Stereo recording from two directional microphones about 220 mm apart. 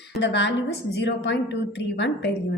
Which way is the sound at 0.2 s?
55° left (ahead or behind).